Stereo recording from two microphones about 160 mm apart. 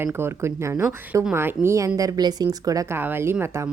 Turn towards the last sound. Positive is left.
turn(degrees=-15)  # may be behind; listen again after turning